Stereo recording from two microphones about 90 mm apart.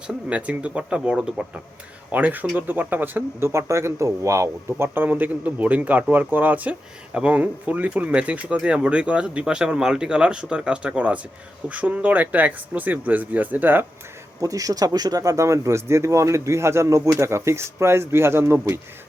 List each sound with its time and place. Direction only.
0.1 s speech: 15° right (ahead or behind)
14.4 s speech: 40° right (ahead or behind)